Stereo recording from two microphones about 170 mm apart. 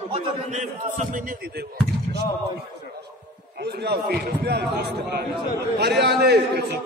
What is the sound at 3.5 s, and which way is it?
Speech, 75° right (ahead or behind).